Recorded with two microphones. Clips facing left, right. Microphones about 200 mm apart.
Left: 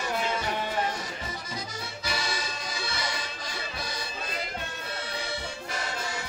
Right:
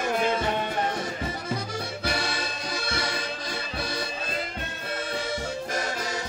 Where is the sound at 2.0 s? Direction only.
60° right (ahead or behind).